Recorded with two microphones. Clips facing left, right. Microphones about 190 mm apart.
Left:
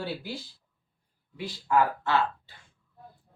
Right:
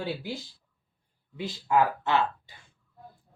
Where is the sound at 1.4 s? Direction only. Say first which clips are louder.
Right 1 dB; 20° right (ahead or behind).